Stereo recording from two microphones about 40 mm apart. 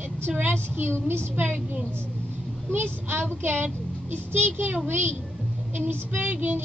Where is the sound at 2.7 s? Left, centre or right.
Right.